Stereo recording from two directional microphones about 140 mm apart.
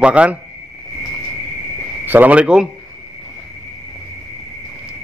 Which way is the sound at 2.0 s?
10° right (ahead or behind).